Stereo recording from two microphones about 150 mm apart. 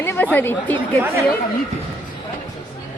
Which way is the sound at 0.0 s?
15° left (ahead or behind).